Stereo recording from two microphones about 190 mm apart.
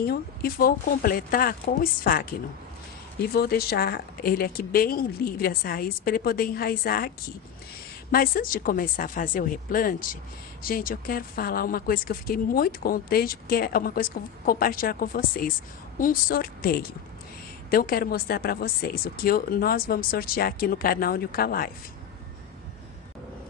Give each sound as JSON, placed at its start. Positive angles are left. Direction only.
{"t": 0.0, "sound": "speech", "side_deg": 55}
{"t": 3.3, "sound": "speech", "side_deg": 55}
{"t": 8.1, "sound": "speech", "side_deg": 50}